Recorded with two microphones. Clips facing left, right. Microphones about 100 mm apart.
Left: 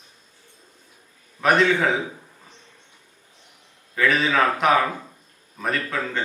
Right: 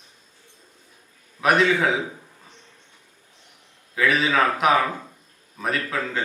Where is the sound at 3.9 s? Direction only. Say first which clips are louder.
Even; 5° right (ahead or behind).